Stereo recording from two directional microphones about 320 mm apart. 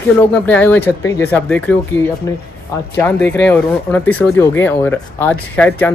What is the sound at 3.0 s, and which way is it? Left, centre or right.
Speech, centre.